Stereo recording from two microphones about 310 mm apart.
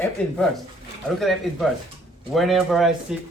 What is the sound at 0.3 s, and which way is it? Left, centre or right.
Speech, centre.